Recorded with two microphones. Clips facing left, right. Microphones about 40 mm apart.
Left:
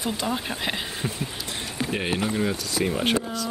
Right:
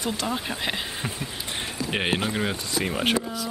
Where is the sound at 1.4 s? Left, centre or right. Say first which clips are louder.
Right 1 dB; right.